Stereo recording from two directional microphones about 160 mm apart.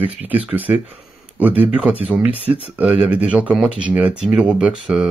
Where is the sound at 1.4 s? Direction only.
10° right (ahead or behind).